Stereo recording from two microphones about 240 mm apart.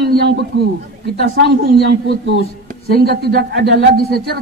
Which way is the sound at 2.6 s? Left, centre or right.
Right.